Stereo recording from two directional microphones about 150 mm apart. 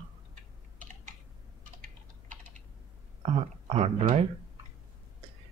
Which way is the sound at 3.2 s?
40° right (ahead or behind).